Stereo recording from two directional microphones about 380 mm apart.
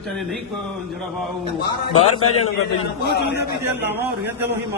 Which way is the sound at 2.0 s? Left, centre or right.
Left.